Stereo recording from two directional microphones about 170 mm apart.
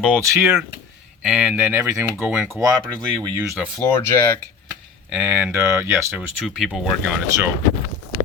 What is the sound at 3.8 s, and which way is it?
Speech, 15° left (ahead or behind).